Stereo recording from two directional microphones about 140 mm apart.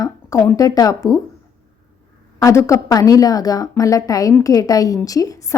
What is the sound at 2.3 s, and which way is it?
Speech, 20° left (ahead or behind).